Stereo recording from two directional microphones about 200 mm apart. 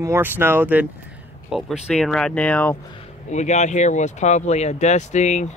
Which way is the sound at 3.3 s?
35° left (ahead or behind).